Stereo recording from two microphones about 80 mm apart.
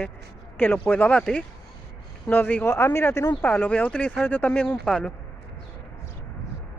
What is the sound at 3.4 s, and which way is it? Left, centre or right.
Speech, centre.